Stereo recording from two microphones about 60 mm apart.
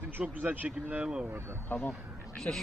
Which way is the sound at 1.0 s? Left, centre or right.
Centre.